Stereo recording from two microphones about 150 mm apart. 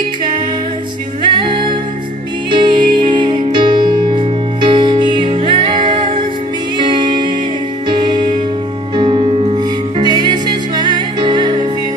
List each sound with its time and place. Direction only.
1.3 s music: 35° right (ahead or behind)